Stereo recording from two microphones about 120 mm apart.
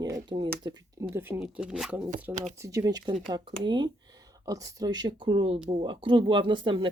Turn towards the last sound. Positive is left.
turn(degrees=-45)  # may be behind; listen again after turning